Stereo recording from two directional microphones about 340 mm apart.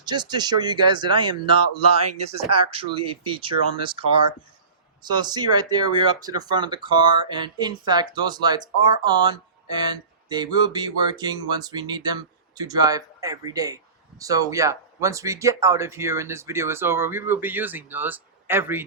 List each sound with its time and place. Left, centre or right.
0.0 s speech: centre